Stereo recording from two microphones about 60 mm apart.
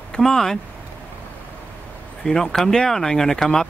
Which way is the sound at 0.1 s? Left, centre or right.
Centre.